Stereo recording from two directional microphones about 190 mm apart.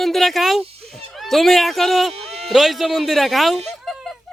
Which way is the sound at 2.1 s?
35° right (ahead or behind).